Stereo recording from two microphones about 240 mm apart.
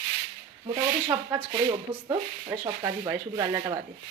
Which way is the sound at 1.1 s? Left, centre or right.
Centre.